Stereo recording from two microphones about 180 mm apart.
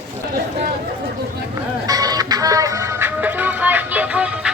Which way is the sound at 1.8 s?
20° right (ahead or behind).